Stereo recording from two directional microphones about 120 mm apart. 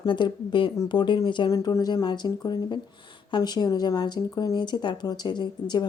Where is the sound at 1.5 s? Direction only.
30° left (ahead or behind).